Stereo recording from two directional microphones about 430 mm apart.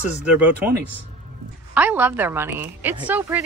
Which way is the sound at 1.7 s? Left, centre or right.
Centre.